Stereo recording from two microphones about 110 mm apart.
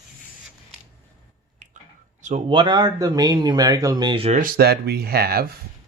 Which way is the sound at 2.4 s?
50° right (ahead or behind).